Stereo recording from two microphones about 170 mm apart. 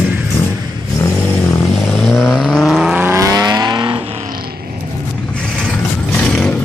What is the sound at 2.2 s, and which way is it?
Vehicle, centre (ahead or behind).